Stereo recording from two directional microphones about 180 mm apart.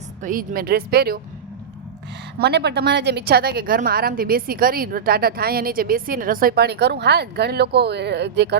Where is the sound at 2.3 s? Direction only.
65° right (ahead or behind).